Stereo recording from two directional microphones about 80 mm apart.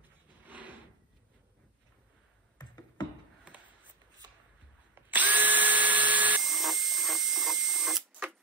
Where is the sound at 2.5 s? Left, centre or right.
Left.